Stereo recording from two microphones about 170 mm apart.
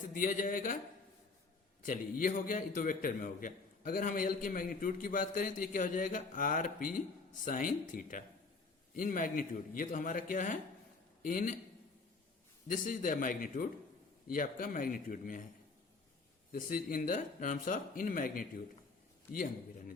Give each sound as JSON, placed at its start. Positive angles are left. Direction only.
{"t": 0.1, "sound": "a man's voice", "side_deg": 50}
{"t": 1.8, "sound": "a man's voice", "side_deg": 50}
{"t": 12.6, "sound": "a man's voice", "side_deg": 55}
{"t": 16.5, "sound": "a man's voice", "side_deg": 60}